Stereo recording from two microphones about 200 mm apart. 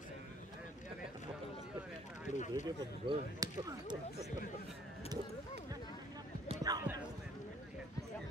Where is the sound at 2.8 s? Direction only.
20° right (ahead or behind).